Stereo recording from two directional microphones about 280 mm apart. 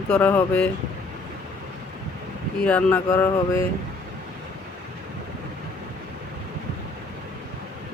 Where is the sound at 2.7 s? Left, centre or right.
Centre.